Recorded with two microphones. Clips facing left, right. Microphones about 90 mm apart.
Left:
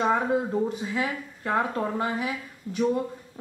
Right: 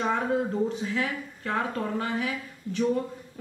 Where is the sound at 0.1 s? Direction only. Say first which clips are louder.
Left 2 dB; 10° left (ahead or behind).